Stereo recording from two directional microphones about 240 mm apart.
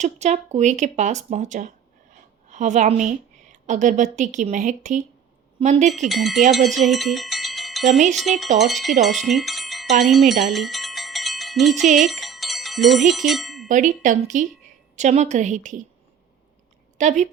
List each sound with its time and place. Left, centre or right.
0.0 s a woman's voice: right
6.1 s speech: centre
6.8 s a sound: centre
7.9 s speech: right
8.2 s speech: centre
10.5 s a sound: centre
11.9 s music: centre
13.7 s speech: right
17.0 s a woman's voice: right